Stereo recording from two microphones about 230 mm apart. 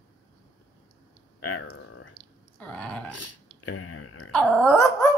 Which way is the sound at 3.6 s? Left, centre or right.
Left.